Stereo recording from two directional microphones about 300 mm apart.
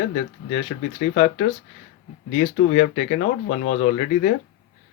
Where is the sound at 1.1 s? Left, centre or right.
Left.